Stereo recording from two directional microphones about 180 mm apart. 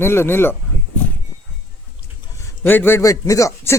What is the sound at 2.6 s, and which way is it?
A man's voice, 10° left (ahead or behind).